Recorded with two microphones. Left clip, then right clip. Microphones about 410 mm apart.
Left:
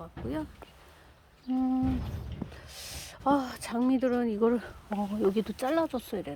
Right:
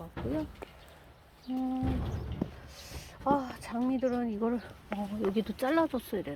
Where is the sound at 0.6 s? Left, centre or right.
Right.